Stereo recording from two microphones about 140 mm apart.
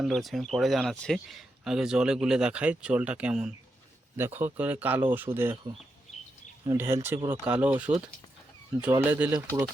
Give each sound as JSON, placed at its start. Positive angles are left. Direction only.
{"t": 0.0, "sound": "speech", "side_deg": 0}
{"t": 6.7, "sound": "speech", "side_deg": -20}